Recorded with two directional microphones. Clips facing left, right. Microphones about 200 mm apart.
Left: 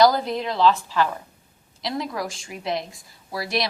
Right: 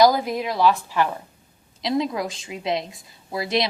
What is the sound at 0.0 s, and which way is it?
A woman's voice, 10° right (ahead or behind).